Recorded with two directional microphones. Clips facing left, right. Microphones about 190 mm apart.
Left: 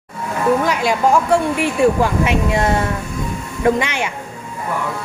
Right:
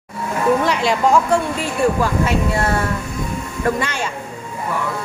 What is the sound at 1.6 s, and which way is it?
A woman's voice, 15° left (ahead or behind).